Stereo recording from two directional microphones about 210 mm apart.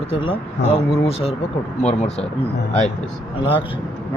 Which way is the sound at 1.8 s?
30° left (ahead or behind).